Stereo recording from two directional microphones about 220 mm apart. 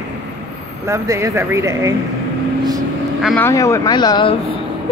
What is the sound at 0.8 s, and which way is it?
Female singing, 15° right (ahead or behind).